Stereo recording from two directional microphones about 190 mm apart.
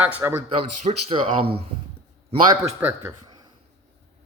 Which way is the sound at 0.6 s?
30° right (ahead or behind).